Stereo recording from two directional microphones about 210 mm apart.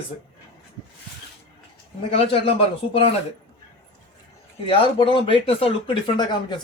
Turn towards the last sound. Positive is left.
turn(degrees=20)  # may be behind; listen again after turning